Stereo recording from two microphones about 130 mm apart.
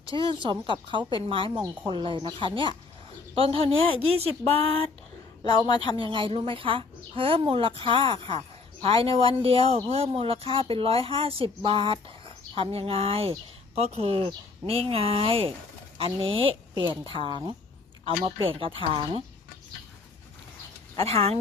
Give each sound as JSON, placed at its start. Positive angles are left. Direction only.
{"t": 0.1, "sound": "speech", "side_deg": -40}
{"t": 5.5, "sound": "a woman's voice", "side_deg": 35}
{"t": 6.0, "sound": "speech", "side_deg": -40}
{"t": 20.9, "sound": "speech", "side_deg": -50}